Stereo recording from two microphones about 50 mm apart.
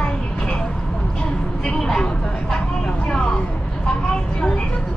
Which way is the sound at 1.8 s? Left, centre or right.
Centre.